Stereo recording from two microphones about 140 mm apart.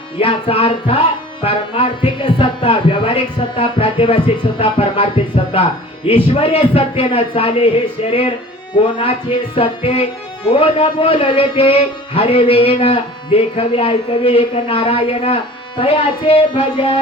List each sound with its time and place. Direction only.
0.2 s a man's voice: 40° left (ahead or behind)
8.7 s speech: 40° left (ahead or behind)